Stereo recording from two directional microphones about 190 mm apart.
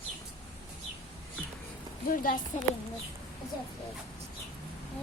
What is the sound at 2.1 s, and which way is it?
Speech, 50° left (ahead or behind).